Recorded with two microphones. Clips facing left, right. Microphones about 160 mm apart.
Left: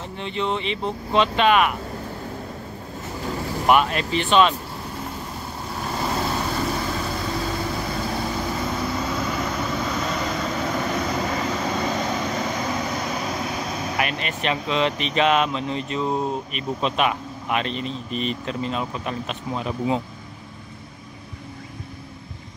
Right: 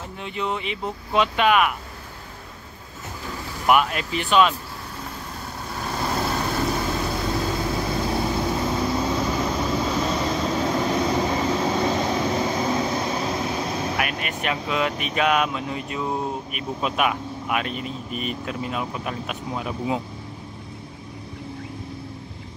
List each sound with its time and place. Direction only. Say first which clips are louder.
0.2 s speech: left 2 dB; 10° right (ahead or behind)
3.7 s speech: left 1 dB; 10° right (ahead or behind)
5.9 s vehicle: even; centre (ahead or behind)
10.0 s vehicle: right 2 dB; 25° right (ahead or behind)
10.4 s vehicle: right 2 dB; 15° right (ahead or behind)
12.7 s vehicle: right 3 dB; 25° right (ahead or behind)
13.3 s speech: right 2 dB; centre (ahead or behind)